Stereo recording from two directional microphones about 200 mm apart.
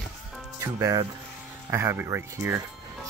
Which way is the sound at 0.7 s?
15° right (ahead or behind).